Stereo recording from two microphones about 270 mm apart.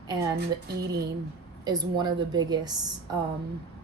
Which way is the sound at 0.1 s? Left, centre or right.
Centre.